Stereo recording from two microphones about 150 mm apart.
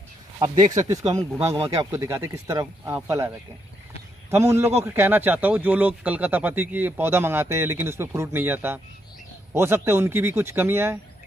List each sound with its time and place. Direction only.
0.6 s speech: 55° right (ahead or behind)
0.8 s speech: 20° right (ahead or behind)